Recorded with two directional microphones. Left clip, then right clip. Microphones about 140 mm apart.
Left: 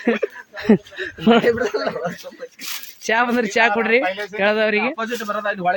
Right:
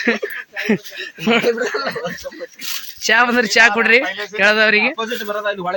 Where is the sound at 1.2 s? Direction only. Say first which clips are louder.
Even; 40° left (ahead or behind).